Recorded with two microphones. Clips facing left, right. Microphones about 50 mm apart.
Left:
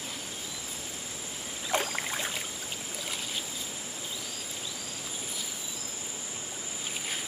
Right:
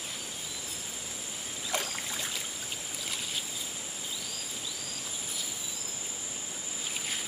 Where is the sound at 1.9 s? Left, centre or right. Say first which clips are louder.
Left 4 dB; left.